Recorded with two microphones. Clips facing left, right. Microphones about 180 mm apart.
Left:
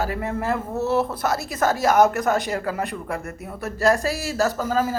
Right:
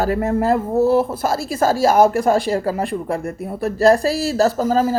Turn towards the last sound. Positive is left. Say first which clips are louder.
# right 5 dB
turn(degrees=-35)  # may be behind; listen again after turning